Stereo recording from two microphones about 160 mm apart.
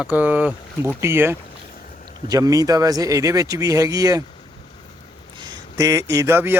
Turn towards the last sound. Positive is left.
turn(degrees=-15)  # may be behind; listen again after turning